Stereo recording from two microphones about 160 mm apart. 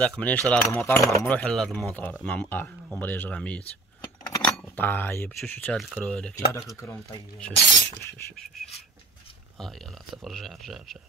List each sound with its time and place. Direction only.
0.5 s speech: 10° left (ahead or behind)
1.2 s speech: 5° left (ahead or behind)
4.3 s keys jangling: 20° left (ahead or behind)
4.6 s speech: 10° left (ahead or behind)
6.3 s speech: 20° left (ahead or behind)
7.5 s speech: 90° left
9.6 s speech: centre (ahead or behind)